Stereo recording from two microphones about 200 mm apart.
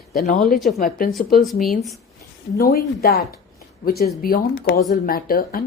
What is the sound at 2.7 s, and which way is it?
Speech, 50° left (ahead or behind).